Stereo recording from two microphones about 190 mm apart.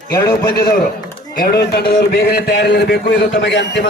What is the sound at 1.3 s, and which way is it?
Speech, 50° left (ahead or behind).